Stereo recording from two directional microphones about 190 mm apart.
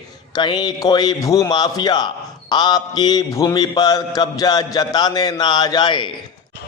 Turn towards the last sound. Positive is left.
turn(degrees=25)  # may be behind; listen again after turning